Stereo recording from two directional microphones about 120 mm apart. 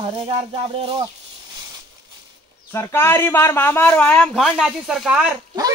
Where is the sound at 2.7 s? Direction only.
20° left (ahead or behind).